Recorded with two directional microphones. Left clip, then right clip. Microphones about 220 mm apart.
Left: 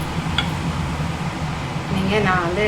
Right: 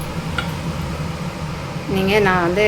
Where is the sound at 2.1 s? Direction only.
40° right (ahead or behind).